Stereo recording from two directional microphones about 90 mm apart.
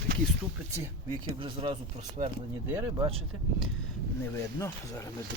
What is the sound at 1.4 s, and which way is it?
Speech, 80° right.